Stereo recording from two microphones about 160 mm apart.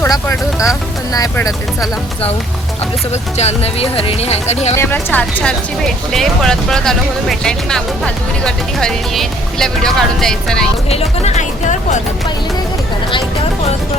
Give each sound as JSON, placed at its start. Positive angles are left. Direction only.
{"t": 0.0, "sound": "speech", "side_deg": 20}
{"t": 3.1, "sound": "speech", "side_deg": 45}
{"t": 4.7, "sound": "speech", "side_deg": 15}
{"t": 10.8, "sound": "speech", "side_deg": 40}